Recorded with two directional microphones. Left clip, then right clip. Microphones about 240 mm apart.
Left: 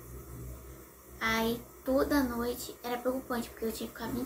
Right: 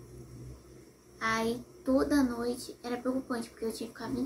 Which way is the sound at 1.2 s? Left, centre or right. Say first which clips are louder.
Even; centre.